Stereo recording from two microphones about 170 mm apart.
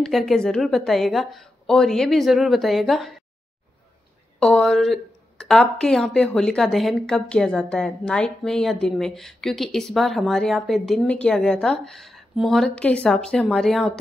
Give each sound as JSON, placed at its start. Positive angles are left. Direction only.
{"t": 0.0, "sound": "a woman's voice", "side_deg": 0}
{"t": 4.4, "sound": "a woman's voice", "side_deg": 5}